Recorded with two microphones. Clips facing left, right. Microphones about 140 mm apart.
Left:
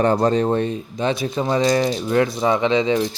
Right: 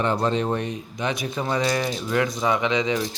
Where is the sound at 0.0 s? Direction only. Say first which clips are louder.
Left 6 dB; 40° left (ahead or behind).